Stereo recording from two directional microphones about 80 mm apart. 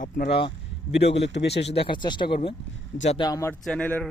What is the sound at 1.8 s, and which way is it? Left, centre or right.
Speech, left.